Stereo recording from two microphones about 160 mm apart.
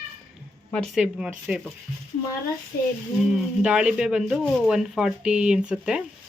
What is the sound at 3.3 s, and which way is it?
Speech, 5° right (ahead or behind).